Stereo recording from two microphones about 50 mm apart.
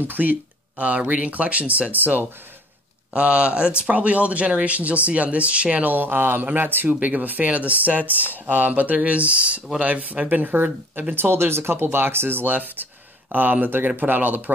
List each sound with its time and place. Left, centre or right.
0.0 s speech: right
3.2 s speech: right